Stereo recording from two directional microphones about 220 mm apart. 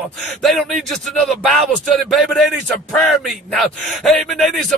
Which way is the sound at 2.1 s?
Centre (ahead or behind).